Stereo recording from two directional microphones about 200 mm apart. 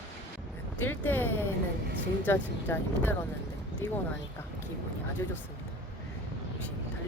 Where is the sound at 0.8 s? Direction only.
10° left (ahead or behind).